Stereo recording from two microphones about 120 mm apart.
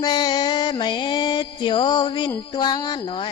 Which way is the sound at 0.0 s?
35° left (ahead or behind).